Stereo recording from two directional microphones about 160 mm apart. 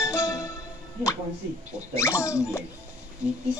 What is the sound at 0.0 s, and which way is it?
Music, 20° left (ahead or behind).